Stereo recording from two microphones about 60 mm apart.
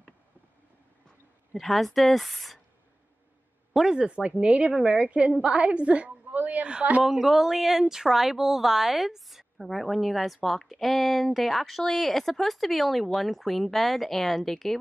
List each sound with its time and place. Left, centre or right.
1.5 s speech: centre
3.7 s a woman's voice: centre
7.1 s speech: centre